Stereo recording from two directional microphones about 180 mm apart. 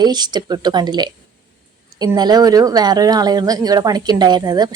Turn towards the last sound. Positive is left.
turn(degrees=-20)  # may be behind; listen again after turning